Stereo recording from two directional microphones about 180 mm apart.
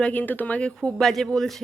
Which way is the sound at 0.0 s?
10° left (ahead or behind).